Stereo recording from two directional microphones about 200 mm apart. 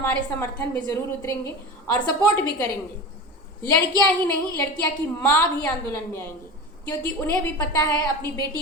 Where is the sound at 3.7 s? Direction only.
10° left (ahead or behind).